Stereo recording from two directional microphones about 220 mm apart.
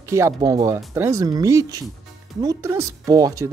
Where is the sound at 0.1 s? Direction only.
15° right (ahead or behind).